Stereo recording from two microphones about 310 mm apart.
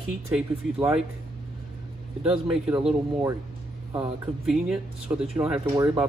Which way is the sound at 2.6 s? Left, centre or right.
Centre.